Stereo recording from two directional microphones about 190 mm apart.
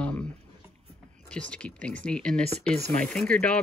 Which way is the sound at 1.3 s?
5° left (ahead or behind).